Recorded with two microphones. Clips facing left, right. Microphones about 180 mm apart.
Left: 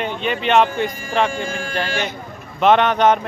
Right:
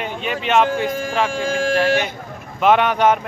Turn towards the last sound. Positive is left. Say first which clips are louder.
# left 1 dB
turn(degrees=-10)  # may be behind; listen again after turning